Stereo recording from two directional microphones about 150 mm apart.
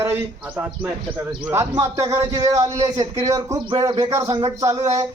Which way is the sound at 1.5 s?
20° right (ahead or behind).